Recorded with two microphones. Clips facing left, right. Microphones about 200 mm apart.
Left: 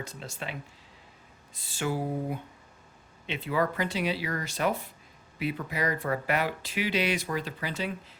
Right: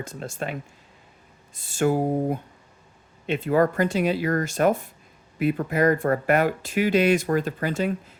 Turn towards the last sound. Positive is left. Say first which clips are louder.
# right 8 dB
turn(degrees=-50)  # may be behind; listen again after turning